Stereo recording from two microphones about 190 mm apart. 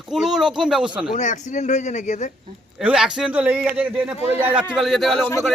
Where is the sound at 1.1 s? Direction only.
40° left (ahead or behind).